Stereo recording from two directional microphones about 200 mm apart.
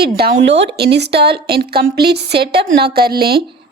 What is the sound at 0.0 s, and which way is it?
A woman's voice, 55° right (ahead or behind).